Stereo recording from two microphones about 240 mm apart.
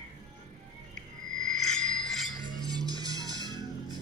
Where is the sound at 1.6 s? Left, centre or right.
Centre.